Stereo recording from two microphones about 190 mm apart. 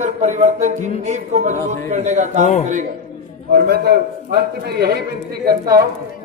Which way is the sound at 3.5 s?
55° right (ahead or behind).